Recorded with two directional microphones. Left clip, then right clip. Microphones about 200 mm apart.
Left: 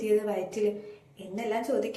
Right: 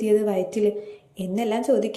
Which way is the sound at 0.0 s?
35° right (ahead or behind).